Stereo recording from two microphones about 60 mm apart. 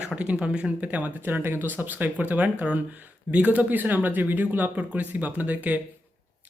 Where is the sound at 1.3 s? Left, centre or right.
Right.